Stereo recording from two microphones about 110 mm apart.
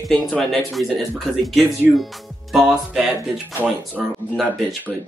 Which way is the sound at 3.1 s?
15° right (ahead or behind).